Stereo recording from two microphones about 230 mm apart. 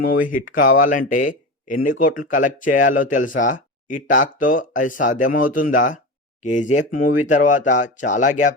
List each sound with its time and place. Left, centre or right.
0.0 s speech: left